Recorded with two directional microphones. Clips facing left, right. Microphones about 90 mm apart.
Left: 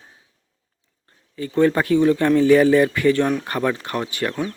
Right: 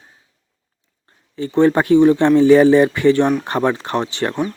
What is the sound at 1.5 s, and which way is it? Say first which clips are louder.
Speech: right 4 dB; 25° right (ahead or behind).